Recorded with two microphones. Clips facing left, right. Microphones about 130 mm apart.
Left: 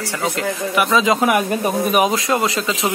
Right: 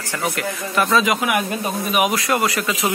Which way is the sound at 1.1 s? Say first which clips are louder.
Left 4 dB; 35° left (ahead or behind).